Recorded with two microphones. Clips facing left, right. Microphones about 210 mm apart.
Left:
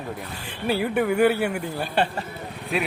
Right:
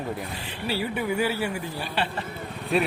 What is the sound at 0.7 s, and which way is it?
Speech, 55° left (ahead or behind).